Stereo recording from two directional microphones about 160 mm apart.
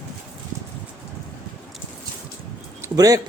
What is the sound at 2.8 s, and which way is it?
Speech, 20° right (ahead or behind).